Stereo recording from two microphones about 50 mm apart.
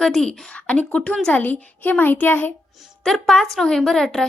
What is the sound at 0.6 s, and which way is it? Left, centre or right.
A child's voice, left.